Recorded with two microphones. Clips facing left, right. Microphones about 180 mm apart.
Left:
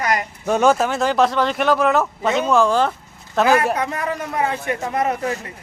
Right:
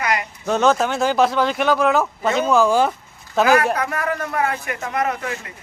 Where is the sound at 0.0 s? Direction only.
40° left (ahead or behind).